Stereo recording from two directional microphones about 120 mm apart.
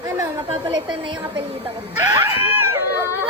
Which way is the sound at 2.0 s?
20° right (ahead or behind).